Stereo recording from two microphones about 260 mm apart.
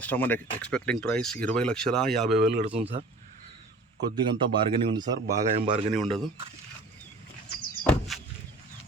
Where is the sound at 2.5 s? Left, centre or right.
Right.